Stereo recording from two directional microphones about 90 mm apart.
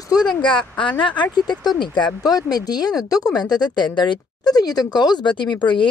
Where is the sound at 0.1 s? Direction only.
50° left (ahead or behind).